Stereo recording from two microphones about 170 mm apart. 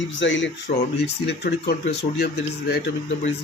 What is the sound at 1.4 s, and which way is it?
Speech, 75° left (ahead or behind).